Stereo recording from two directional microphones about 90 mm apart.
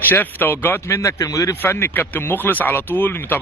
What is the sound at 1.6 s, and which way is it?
Speech, 25° left (ahead or behind).